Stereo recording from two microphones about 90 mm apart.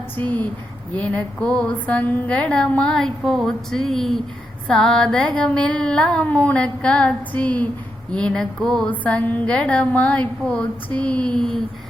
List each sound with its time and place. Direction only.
0.2 s a woman's voice: 20° left (ahead or behind)